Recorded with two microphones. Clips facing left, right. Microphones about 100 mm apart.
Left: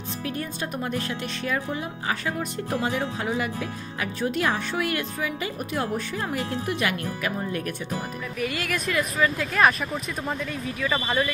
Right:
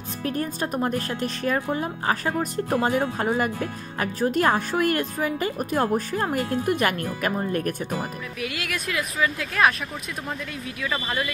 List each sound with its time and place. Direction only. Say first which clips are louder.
0.2 s speech: right 5 dB; 40° right (ahead or behind)
8.4 s speech: left 3 dB; centre (ahead or behind)